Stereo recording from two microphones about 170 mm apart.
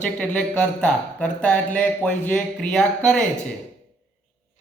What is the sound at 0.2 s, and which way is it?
Speech, 5° left (ahead or behind).